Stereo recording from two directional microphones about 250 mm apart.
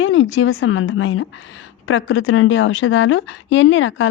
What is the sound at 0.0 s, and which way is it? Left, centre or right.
A woman's voice, left.